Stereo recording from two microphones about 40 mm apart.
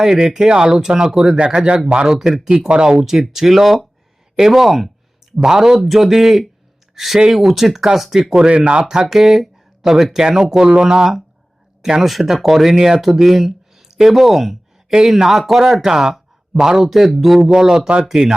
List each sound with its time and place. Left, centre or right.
0.0 s a man's voice: centre
1.5 s speech: right
2.9 s a man's voice: centre
8.4 s speech: right
9.0 s a man's voice: centre
12.0 s a man's voice: centre
15.7 s a man's voice: centre